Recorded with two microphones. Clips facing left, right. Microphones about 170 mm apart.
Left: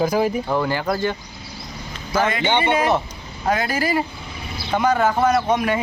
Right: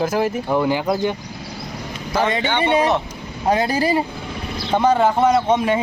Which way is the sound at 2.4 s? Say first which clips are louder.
Right 1 dB; 20° left (ahead or behind).